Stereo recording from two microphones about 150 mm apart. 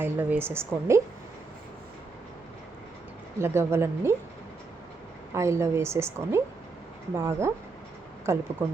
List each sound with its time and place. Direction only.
0.0 s a woman's voice: 15° right (ahead or behind)
3.3 s a woman's voice: 15° right (ahead or behind)
5.3 s a woman's voice: 20° right (ahead or behind)